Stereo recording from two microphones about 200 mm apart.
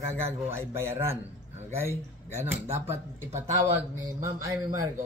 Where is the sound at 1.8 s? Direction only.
15° right (ahead or behind).